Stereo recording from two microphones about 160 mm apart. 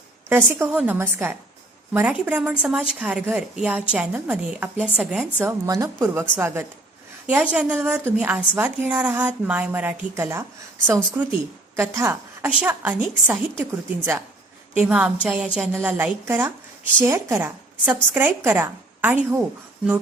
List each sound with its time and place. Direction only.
0.3 s a woman's voice: 15° right (ahead or behind)